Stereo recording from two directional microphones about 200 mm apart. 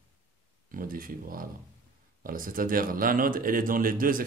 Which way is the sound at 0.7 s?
45° right (ahead or behind).